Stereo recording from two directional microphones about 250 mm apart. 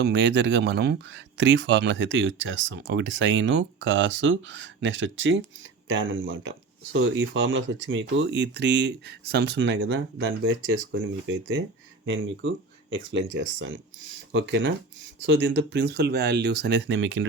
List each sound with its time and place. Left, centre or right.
0.0 s speech: right